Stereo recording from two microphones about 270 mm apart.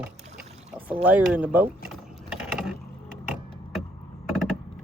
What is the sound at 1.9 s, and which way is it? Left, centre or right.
Mechanisms, centre.